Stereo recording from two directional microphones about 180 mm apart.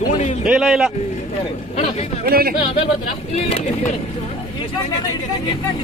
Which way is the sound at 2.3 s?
55° right (ahead or behind).